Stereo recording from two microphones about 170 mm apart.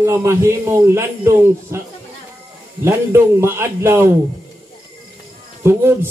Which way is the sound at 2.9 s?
15° right (ahead or behind).